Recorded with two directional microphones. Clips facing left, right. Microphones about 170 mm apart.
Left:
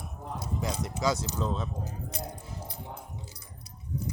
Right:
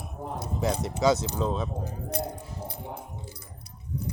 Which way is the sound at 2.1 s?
60° right (ahead or behind).